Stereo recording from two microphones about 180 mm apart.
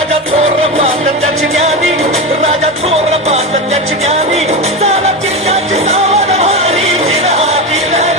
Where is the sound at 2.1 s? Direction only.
35° right (ahead or behind).